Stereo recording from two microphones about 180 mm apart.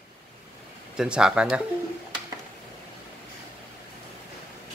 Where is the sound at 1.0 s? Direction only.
5° right (ahead or behind).